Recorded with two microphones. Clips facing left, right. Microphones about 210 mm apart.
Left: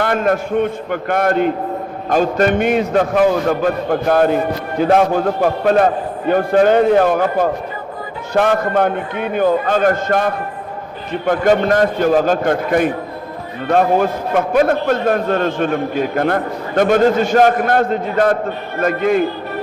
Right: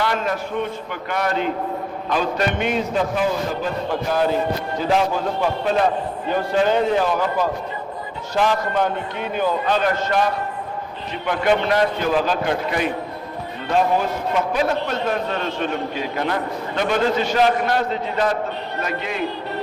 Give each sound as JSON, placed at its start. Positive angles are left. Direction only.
{"t": 0.0, "sound": "a man's voice", "side_deg": 55}